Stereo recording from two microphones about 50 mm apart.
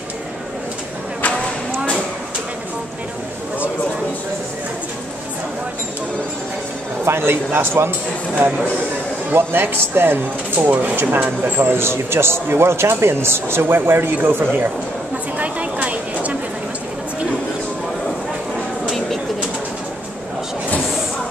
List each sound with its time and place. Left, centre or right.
7.1 s a man's voice: right
9.3 s a man's voice: right
10.6 s speech: right
11.6 s a man's voice: right
15.3 s a sound: right